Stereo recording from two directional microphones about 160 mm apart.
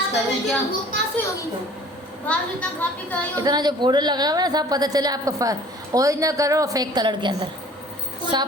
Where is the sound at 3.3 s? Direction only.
25° right (ahead or behind).